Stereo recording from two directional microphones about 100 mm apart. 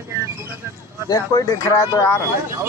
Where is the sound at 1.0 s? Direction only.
35° left (ahead or behind).